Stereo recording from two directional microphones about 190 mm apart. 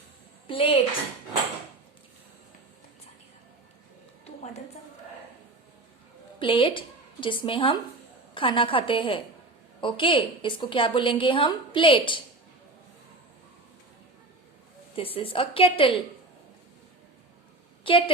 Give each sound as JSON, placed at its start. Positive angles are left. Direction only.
{"t": 0.4, "sound": "a woman's voice", "side_deg": 30}
{"t": 6.4, "sound": "a woman's voice", "side_deg": 25}
{"t": 14.9, "sound": "a woman's voice", "side_deg": 30}
{"t": 17.8, "sound": "a woman's voice", "side_deg": 25}